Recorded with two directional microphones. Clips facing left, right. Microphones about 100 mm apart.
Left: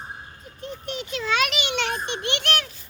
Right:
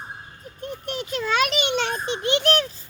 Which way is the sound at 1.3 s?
40° right (ahead or behind).